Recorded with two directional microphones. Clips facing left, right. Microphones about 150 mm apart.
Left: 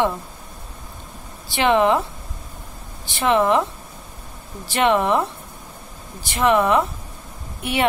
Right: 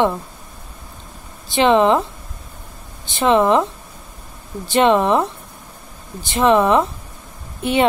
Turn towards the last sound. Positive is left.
turn(degrees=-20)  # may be behind; listen again after turning